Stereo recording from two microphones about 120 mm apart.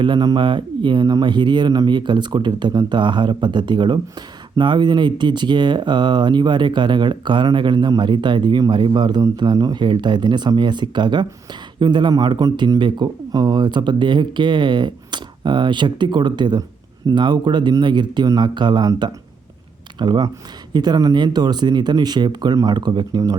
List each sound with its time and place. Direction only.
0.0 s speech: 40° right (ahead or behind)